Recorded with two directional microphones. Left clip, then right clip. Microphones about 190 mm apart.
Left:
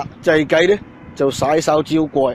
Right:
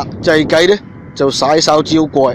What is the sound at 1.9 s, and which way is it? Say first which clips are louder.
Speech: right 5 dB; 35° right (ahead or behind).